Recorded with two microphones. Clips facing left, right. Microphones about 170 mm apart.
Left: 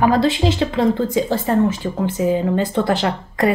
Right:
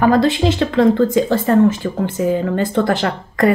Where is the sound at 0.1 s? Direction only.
50° right (ahead or behind).